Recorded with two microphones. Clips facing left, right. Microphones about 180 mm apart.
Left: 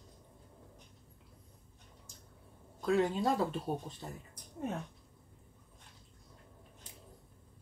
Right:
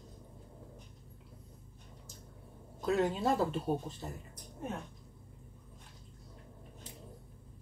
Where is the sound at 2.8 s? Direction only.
5° right (ahead or behind).